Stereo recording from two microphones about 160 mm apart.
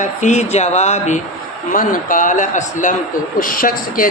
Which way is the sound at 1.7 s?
55° left (ahead or behind).